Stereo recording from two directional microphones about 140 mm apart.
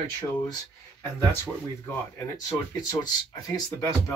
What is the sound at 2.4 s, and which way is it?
Speech, 25° left (ahead or behind).